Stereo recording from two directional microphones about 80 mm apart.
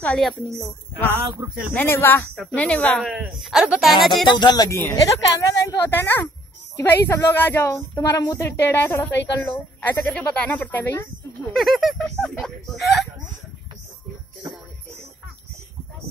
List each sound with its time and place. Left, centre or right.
0.2 s speech: centre
0.6 s speech: left
2.5 s speech: centre
3.1 s speech: centre
4.0 s speech: centre
4.4 s speech: left
4.6 s a woman's voice: left
4.9 s a woman's voice: left
5.8 s speech: left
8.0 s a woman's voice: left
8.5 s speech: left
11.5 s speech: centre